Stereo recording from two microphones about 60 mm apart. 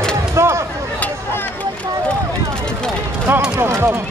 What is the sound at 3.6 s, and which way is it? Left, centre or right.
Music, right.